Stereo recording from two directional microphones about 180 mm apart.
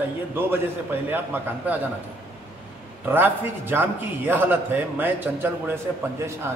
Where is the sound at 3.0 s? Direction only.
10° right (ahead or behind).